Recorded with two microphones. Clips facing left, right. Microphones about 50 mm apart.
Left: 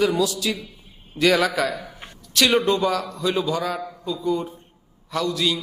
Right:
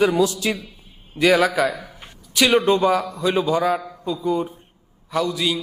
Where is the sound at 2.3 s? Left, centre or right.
Centre.